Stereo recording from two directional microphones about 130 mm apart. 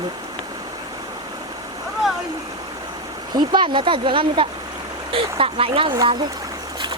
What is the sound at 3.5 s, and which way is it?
Speech, 35° right (ahead or behind).